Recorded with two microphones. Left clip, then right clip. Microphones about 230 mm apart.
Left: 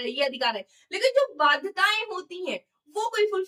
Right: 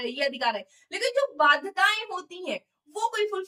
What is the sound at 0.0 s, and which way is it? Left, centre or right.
A woman's voice, centre.